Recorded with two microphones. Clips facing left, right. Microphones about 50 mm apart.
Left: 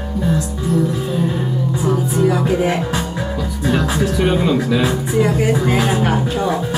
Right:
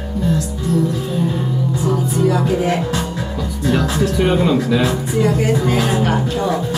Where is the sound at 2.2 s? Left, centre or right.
Centre.